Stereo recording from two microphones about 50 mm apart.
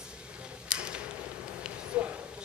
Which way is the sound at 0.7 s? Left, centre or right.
Right.